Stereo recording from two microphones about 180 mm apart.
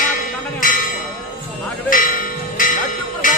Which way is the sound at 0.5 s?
50° left (ahead or behind).